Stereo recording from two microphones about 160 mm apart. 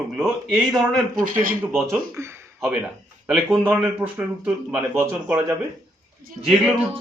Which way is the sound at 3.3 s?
5° right (ahead or behind).